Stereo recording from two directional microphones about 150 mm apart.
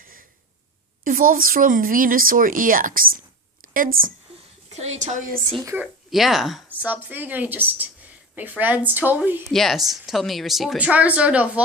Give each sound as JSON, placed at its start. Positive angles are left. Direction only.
{"t": 0.0, "sound": "a sound", "side_deg": -70}
{"t": 1.0, "sound": "a woman's voice", "side_deg": -70}
{"t": 4.7, "sound": "a woman's voice", "side_deg": -45}
{"t": 5.6, "sound": "speech", "side_deg": -10}
{"t": 6.1, "sound": "speech", "side_deg": 0}
{"t": 9.5, "sound": "speech", "side_deg": 0}